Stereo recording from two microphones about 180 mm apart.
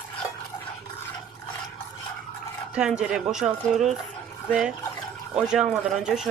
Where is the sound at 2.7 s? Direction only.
5° right (ahead or behind).